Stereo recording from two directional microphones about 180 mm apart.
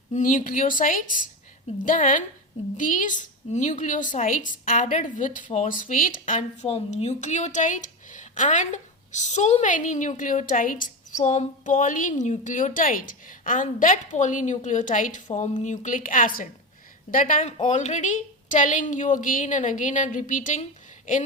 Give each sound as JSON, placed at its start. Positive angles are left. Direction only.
{"t": 0.1, "sound": "a woman's voice", "side_deg": 45}